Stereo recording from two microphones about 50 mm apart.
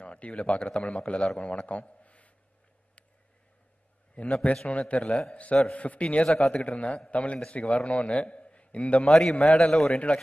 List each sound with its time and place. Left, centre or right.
0.0 s a man's voice: left
4.2 s speech: left
6.2 s a man's voice: centre
6.5 s speech: left
8.3 s a sound: left
9.1 s a man's voice: centre